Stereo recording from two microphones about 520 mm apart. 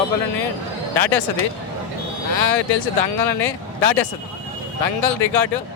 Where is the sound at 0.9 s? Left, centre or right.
Left.